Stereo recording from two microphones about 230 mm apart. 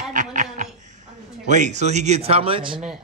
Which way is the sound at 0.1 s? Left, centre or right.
Right.